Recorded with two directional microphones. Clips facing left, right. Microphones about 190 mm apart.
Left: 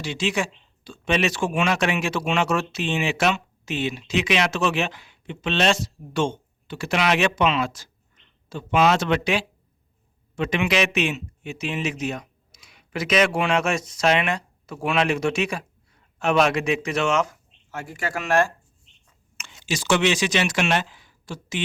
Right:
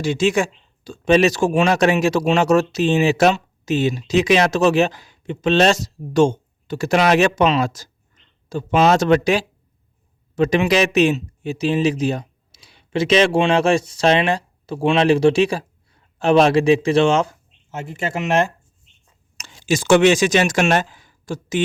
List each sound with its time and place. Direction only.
0.0 s speech: 45° right (ahead or behind); by 18.5 s 20° right (ahead or behind)
19.4 s speech: 40° right (ahead or behind)